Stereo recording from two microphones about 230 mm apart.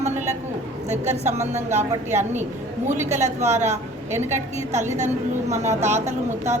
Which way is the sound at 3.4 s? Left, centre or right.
Right.